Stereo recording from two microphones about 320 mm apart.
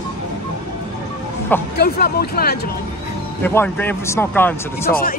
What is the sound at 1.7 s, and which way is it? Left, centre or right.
Speech, left.